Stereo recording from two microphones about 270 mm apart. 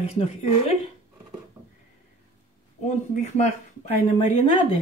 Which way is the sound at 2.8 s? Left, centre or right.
Left.